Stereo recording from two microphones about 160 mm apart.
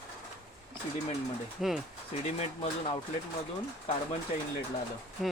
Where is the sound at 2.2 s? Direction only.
40° left (ahead or behind).